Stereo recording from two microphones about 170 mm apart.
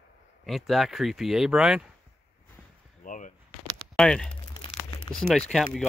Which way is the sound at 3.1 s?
50° left (ahead or behind).